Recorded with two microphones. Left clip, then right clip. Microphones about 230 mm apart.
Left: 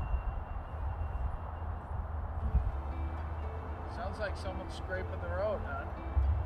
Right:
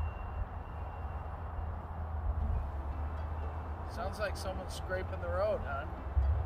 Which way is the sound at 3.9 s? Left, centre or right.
Right.